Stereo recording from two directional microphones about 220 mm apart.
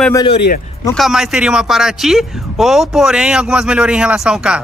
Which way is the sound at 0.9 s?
Centre (ahead or behind).